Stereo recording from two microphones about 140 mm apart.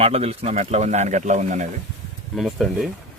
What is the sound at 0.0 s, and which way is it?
Speech, 45° right (ahead or behind).